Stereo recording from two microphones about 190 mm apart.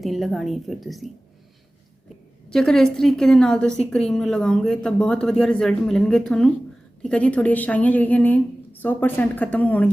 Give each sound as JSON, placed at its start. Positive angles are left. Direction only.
{"t": 0.0, "sound": "a woman's voice", "side_deg": 0}
{"t": 2.5, "sound": "a woman's voice", "side_deg": 5}